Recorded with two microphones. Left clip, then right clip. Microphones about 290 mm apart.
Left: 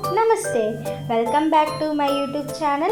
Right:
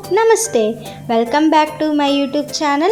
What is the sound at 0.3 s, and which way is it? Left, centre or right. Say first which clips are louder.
A woman's voice: right 6 dB; right.